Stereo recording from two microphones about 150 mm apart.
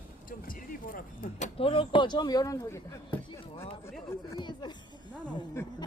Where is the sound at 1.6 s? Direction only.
35° left (ahead or behind); by 3.2 s 15° left (ahead or behind).